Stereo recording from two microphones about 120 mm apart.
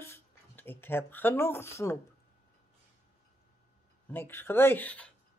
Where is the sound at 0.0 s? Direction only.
20° left (ahead or behind).